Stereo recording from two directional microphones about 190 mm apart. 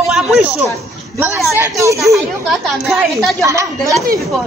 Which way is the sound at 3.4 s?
15° right (ahead or behind).